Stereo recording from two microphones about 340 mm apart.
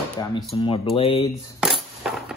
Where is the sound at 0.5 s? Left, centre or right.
Centre.